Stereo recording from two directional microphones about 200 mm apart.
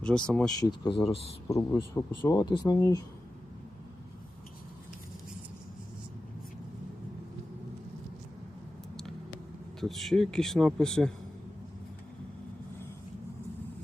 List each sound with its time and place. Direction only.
0.0 s speech: 5° left (ahead or behind)
0.6 s speech: 25° left (ahead or behind)
1.5 s speech: 15° left (ahead or behind)
9.8 s speech: centre (ahead or behind)